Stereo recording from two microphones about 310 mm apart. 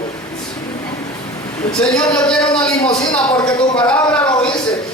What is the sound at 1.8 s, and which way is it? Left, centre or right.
A man's voice, centre.